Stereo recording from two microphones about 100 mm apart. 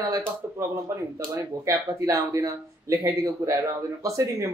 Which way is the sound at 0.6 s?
30° right (ahead or behind).